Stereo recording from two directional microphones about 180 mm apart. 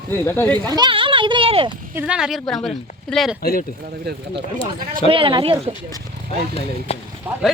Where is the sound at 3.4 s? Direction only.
55° left (ahead or behind).